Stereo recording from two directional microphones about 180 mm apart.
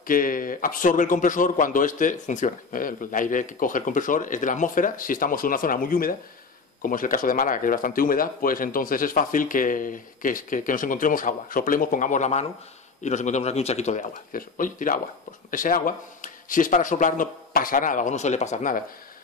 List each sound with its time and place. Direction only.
0.0 s speech: 50° left (ahead or behind)